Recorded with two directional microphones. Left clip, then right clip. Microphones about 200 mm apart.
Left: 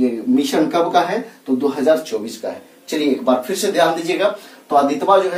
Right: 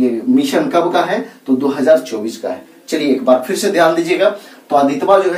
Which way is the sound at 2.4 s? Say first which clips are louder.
Right 4 dB; 20° left (ahead or behind).